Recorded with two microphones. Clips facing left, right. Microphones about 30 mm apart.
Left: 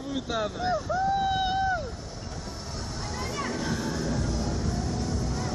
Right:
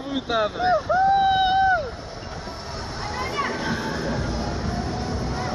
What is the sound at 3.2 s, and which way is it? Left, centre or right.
Vehicle, right.